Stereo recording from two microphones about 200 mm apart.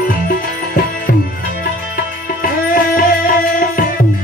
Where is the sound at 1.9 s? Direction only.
45° left (ahead or behind).